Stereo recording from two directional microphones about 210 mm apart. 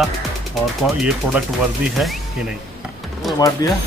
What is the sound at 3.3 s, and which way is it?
Speech, 15° left (ahead or behind).